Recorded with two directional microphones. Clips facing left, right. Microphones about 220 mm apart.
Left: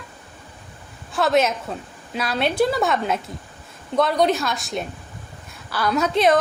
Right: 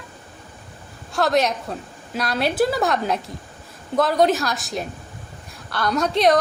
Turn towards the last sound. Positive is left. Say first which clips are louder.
# even
turn(degrees=0)  # may be behind; listen again after turning